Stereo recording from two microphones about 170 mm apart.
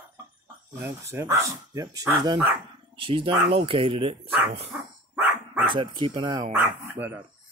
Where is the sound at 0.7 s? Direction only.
15° right (ahead or behind).